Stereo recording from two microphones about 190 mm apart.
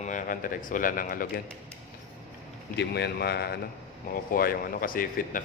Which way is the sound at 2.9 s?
60° left (ahead or behind).